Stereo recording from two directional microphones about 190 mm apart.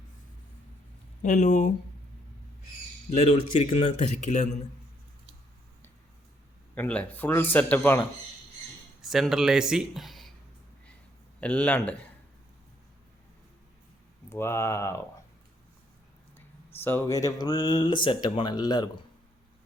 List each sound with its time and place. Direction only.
1.2 s speech: 40° left (ahead or behind)
3.2 s speech: 35° left (ahead or behind)
6.7 s speech: 5° left (ahead or behind)
9.0 s speech: centre (ahead or behind)
11.3 s speech: 5° left (ahead or behind)
14.3 s speech: 15° left (ahead or behind)
16.7 s speech: 10° left (ahead or behind)